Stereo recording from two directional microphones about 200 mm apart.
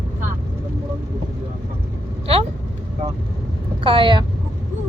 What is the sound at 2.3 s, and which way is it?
Speech, 30° right (ahead or behind).